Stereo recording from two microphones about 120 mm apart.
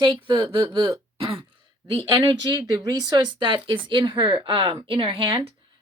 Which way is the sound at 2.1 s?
40° right (ahead or behind).